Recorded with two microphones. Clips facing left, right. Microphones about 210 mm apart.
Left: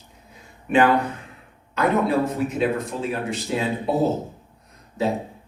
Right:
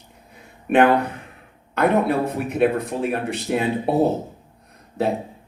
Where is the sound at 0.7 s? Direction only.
60° right (ahead or behind).